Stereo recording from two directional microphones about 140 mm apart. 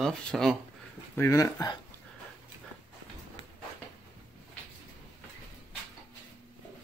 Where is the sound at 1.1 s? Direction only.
20° left (ahead or behind).